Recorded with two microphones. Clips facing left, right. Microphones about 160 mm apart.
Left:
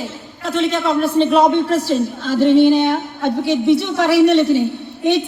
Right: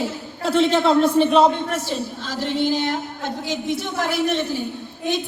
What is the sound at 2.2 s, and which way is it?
A woman's voice, 55° left (ahead or behind).